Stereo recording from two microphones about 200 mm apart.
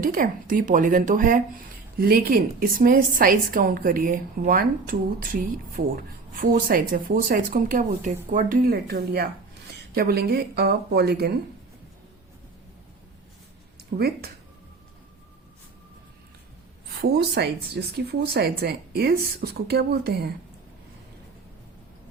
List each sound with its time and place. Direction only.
0.0 s a woman's voice: 45° right (ahead or behind)
13.9 s a woman's voice: 45° right (ahead or behind)
17.0 s a woman's voice: 50° right (ahead or behind)